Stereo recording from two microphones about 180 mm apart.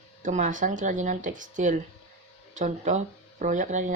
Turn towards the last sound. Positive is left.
turn(degrees=-45)  # may be behind; listen again after turning